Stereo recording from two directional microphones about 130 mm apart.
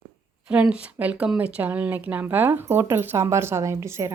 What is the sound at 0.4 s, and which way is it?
Speech, 5° right (ahead or behind).